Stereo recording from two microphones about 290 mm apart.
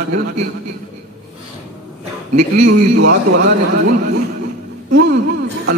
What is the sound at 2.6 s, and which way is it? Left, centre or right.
Speech, right.